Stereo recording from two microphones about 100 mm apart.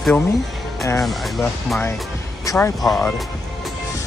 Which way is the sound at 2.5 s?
35° left (ahead or behind).